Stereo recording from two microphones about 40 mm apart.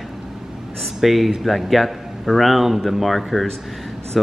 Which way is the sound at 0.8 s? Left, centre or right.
Centre.